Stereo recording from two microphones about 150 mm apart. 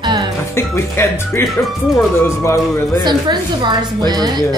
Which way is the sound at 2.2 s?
20° left (ahead or behind).